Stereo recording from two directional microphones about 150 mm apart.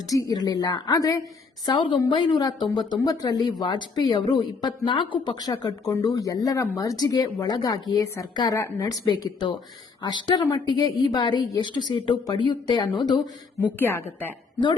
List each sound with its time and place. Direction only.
0.1 s a woman's voice: 25° left (ahead or behind)
9.0 s a woman's voice: 30° left (ahead or behind)
13.7 s a woman's voice: 15° left (ahead or behind)